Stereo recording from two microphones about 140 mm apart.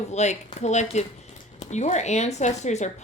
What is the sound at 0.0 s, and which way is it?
Speech, 55° left (ahead or behind).